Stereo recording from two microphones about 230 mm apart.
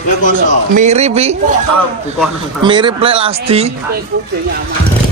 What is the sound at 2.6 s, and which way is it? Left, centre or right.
A man's voice, right.